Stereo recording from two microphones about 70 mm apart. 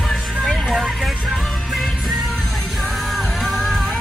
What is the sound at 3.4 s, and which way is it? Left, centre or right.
Music, centre.